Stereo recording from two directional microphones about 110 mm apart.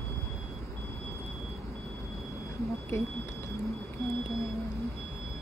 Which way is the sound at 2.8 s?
25° left (ahead or behind).